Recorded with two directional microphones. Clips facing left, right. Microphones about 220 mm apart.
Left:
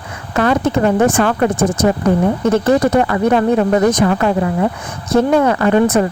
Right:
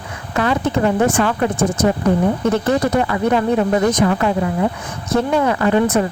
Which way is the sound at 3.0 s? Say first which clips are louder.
Left 3 dB; 50° left (ahead or behind).